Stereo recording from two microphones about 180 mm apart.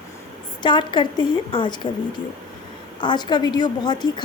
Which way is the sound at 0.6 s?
25° left (ahead or behind).